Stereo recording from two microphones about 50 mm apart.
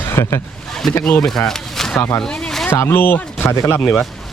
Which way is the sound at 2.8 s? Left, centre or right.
Left.